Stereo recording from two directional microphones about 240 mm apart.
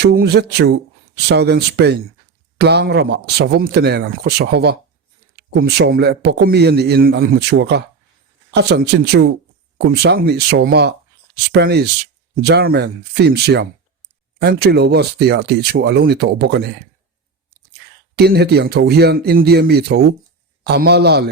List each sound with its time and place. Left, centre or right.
0.0 s speech: right
18.2 s speech: right